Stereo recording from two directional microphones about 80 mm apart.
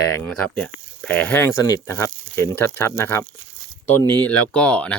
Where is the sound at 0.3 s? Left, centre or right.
Centre.